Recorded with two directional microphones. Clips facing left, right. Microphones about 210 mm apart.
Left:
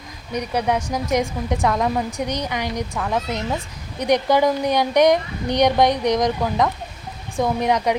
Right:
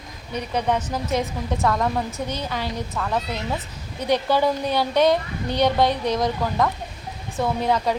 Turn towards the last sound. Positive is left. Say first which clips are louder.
# left 2 dB
turn(degrees=15)  # may be behind; listen again after turning